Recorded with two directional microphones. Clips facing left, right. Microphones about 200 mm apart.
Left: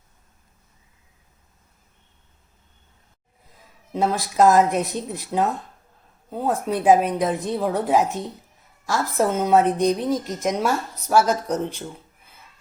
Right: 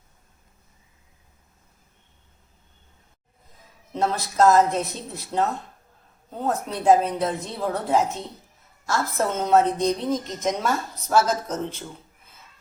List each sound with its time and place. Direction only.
3.9 s a woman's voice: 10° left (ahead or behind)
6.5 s a woman's voice: 15° left (ahead or behind)